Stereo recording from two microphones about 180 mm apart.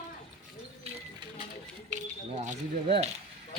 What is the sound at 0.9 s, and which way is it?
Music, 35° right (ahead or behind).